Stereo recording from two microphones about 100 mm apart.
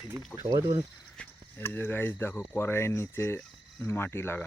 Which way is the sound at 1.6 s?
20° left (ahead or behind).